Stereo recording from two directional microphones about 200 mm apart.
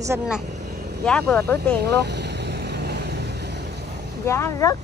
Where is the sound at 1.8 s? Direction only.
55° right (ahead or behind).